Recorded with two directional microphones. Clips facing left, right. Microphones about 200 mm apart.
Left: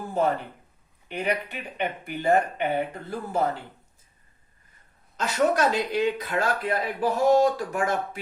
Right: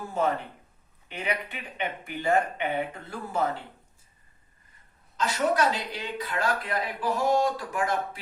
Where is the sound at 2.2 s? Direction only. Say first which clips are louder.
Left 3 dB; 40° left (ahead or behind).